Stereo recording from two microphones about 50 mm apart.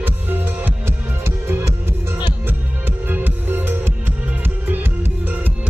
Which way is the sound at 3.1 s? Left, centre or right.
Right.